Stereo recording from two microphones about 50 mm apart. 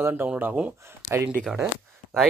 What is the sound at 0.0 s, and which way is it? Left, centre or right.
Speech, right.